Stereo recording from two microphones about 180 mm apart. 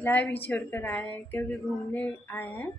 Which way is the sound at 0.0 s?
10° left (ahead or behind).